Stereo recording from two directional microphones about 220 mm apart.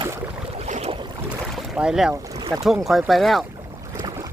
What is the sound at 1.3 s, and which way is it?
Boat, centre (ahead or behind).